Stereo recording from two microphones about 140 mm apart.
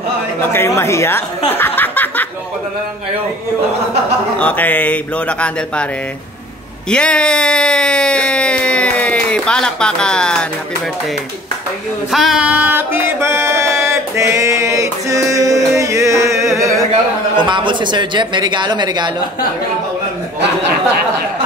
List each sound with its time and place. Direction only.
0.5 s speech: 20° left (ahead or behind)
1.5 s a sound: 15° left (ahead or behind)
4.4 s a man's voice: 10° left (ahead or behind)
6.9 s speech: 5° left (ahead or behind)
12.1 s music: centre (ahead or behind); by 13.7 s 20° right (ahead or behind)
13.8 s mantra: 20° right (ahead or behind)
17.5 s speech: 35° right (ahead or behind)